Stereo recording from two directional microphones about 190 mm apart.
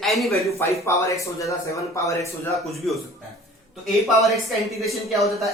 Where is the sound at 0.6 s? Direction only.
15° left (ahead or behind).